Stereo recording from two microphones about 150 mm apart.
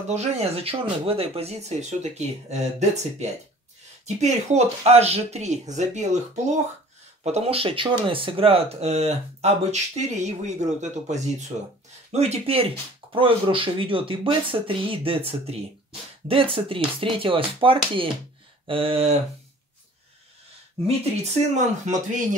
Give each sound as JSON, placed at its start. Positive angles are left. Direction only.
{"t": 0.1, "sound": "speech", "side_deg": -45}
{"t": 20.8, "sound": "speech", "side_deg": -45}